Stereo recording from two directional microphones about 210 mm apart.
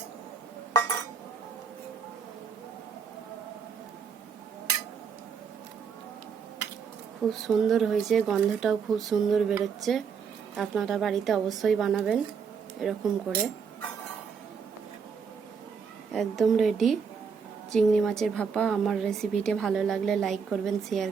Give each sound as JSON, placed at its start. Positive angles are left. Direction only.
{"t": 0.7, "sound": "chink", "side_deg": 15}
{"t": 7.4, "sound": "speech", "side_deg": 0}
{"t": 16.1, "sound": "speech", "side_deg": 0}